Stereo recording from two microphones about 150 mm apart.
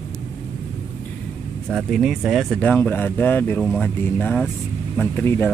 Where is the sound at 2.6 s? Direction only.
10° left (ahead or behind).